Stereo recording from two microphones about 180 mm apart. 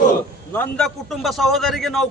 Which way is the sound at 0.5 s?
5° left (ahead or behind).